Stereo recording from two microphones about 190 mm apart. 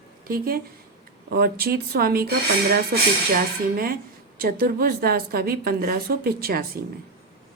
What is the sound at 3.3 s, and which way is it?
A woman's voice, 50° right (ahead or behind).